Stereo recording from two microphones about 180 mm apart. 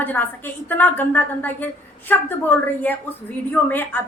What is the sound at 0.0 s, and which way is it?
A woman's voice, 10° left (ahead or behind).